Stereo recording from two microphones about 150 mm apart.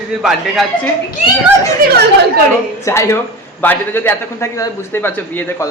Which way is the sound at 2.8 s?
20° left (ahead or behind).